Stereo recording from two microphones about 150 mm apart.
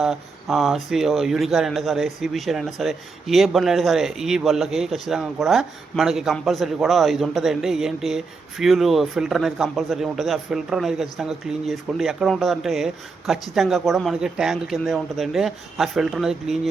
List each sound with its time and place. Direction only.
0.0 s speech: centre (ahead or behind)